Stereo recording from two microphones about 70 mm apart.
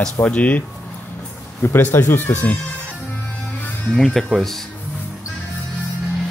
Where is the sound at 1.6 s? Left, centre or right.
Left.